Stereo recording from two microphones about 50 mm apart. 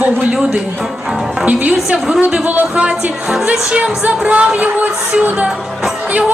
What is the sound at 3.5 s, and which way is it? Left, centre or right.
Speech, centre.